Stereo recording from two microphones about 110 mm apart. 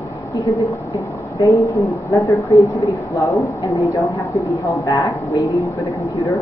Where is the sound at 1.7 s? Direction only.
30° left (ahead or behind).